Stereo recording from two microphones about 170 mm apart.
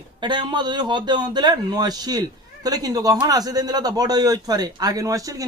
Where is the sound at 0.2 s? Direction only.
25° right (ahead or behind).